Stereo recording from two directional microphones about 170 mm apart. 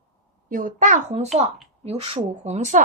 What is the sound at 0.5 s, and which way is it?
A child's voice, 50° right (ahead or behind).